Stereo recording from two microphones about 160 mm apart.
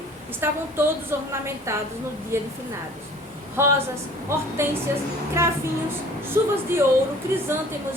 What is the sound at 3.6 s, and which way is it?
Speech, 15° right (ahead or behind).